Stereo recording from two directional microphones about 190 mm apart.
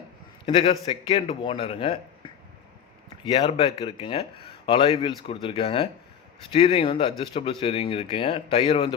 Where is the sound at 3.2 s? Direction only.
20° left (ahead or behind).